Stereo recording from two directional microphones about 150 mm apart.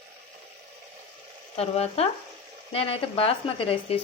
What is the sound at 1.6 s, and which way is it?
Speech, 40° left (ahead or behind).